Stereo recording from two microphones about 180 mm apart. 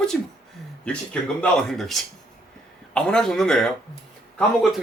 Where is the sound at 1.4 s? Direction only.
Centre (ahead or behind).